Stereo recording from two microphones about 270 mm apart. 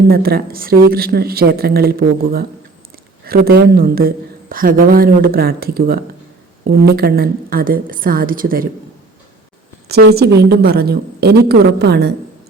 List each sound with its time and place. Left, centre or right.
0.1 s a woman's voice: right
9.9 s a woman's voice: right